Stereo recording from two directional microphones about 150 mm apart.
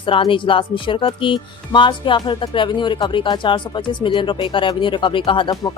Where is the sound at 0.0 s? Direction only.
35° left (ahead or behind).